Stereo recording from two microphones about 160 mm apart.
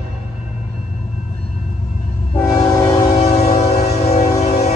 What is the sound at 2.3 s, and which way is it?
Train, 15° left (ahead or behind).